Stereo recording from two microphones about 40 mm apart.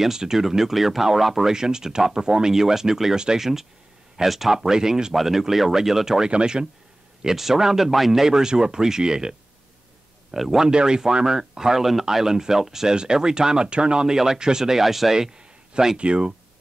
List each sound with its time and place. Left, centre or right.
0.0 s speech: centre
1.5 s speech: centre
7.2 s speech: centre
10.3 s speech: centre
10.6 s speech: right
12.9 s speech: centre
15.3 s a sound: centre
16.0 s speech: right